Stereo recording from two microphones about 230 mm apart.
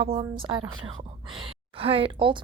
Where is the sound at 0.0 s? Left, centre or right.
Right.